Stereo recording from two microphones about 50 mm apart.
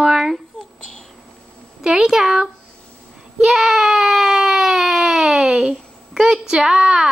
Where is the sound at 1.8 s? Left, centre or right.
Centre.